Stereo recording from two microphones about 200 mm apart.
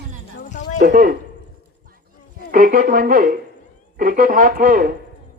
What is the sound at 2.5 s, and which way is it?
A man's voice, 45° right (ahead or behind).